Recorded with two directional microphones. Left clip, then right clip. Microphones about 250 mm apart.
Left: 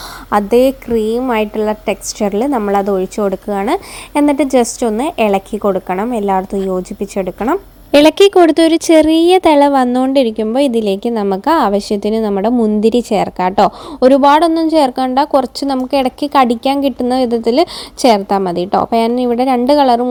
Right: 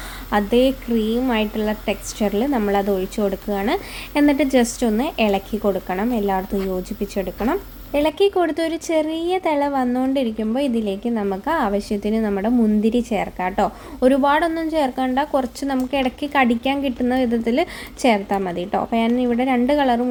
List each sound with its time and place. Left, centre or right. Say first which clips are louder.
0.3 s speech: left 7 dB; left
7.9 s speech: left 11 dB; left